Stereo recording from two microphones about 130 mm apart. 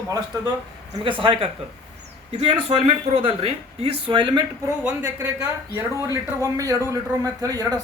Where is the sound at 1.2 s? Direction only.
40° right (ahead or behind).